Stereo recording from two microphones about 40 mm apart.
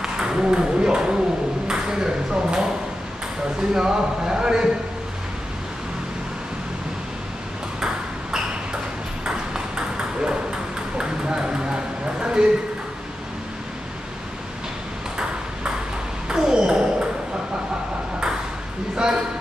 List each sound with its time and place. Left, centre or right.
0.0 s speech: centre
3.7 s speech: centre
9.2 s ping: centre
16.3 s ping: centre
18.9 s a sound: centre